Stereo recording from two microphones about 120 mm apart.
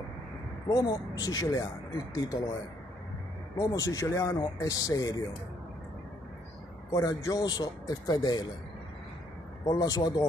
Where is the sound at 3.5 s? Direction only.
30° left (ahead or behind).